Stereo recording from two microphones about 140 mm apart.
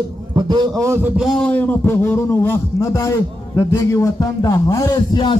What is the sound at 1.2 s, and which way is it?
A man's voice, 5° left (ahead or behind).